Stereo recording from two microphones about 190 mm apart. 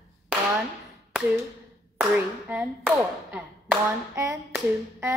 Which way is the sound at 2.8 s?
5° right (ahead or behind).